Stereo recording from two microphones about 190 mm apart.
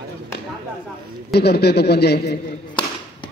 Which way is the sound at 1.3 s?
60° left (ahead or behind).